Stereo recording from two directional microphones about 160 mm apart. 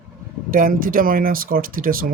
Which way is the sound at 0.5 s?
60° right (ahead or behind).